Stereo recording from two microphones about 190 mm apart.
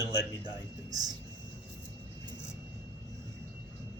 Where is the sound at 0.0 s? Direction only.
20° right (ahead or behind).